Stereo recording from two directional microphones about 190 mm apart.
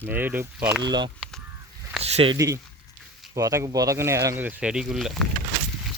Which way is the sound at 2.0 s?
30° right (ahead or behind).